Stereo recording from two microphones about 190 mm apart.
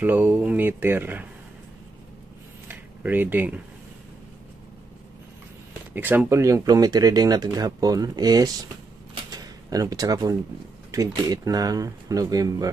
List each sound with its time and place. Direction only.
0.0 s speech: 10° right (ahead or behind)
2.7 s speech: 10° right (ahead or behind)
5.9 s speech: 10° right (ahead or behind)
9.1 s a sound: 20° right (ahead or behind)
10.9 s speech: 20° right (ahead or behind)